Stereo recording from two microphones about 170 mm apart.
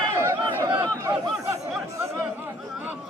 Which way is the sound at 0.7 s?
25° right (ahead or behind).